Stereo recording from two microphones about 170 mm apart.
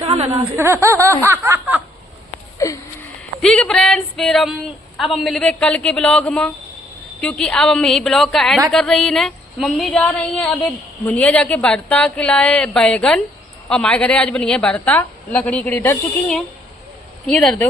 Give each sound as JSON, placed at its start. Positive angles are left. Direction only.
{"t": 0.0, "sound": "a sound", "side_deg": -35}
{"t": 0.3, "sound": "speech", "side_deg": -15}
{"t": 1.2, "sound": "snicker", "side_deg": -15}
{"t": 2.6, "sound": "a woman's voice", "side_deg": 15}
{"t": 3.4, "sound": "a woman's voice", "side_deg": 5}